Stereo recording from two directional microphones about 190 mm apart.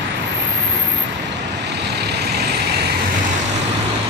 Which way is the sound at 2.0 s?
60° right (ahead or behind).